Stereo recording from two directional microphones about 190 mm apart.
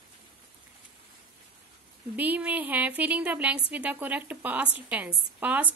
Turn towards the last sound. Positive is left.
turn(degrees=-10)  # may be behind; listen again after turning